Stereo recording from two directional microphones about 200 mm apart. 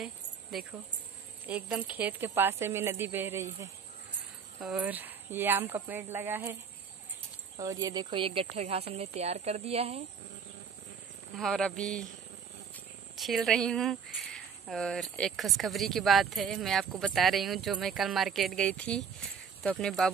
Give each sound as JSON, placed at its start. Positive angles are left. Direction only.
{"t": 0.5, "sound": "speech", "side_deg": 0}
{"t": 4.6, "sound": "speech", "side_deg": -5}
{"t": 7.5, "sound": "speech", "side_deg": -15}
{"t": 11.3, "sound": "speech", "side_deg": 5}
{"t": 13.1, "sound": "speech", "side_deg": 0}